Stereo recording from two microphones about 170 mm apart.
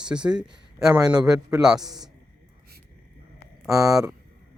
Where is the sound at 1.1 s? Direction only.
20° right (ahead or behind).